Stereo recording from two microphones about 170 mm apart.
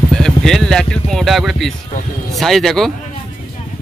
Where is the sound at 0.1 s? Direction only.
5° left (ahead or behind).